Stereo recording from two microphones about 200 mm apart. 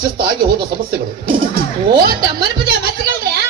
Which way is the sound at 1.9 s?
50° right (ahead or behind).